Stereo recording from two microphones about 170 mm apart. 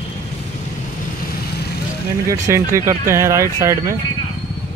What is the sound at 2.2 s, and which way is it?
Speech, 20° right (ahead or behind).